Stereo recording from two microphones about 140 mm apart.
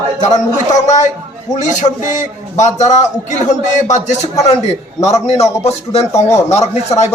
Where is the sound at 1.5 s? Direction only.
55° left (ahead or behind).